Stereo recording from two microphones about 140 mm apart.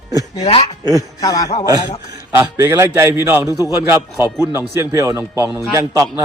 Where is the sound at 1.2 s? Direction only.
25° left (ahead or behind).